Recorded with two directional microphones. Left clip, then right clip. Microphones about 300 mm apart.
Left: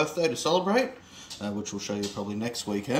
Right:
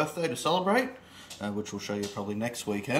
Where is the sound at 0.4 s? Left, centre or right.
Centre.